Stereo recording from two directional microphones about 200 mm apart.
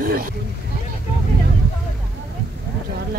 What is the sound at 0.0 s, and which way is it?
Speech, 45° right (ahead or behind).